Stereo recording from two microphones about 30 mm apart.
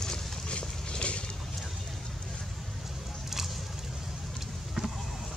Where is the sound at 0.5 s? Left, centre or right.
Left.